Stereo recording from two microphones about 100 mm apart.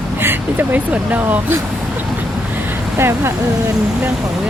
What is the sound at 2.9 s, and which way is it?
Speech, 25° right (ahead or behind).